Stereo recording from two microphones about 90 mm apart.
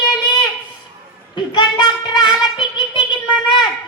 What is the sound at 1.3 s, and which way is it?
Child singing, 55° left (ahead or behind).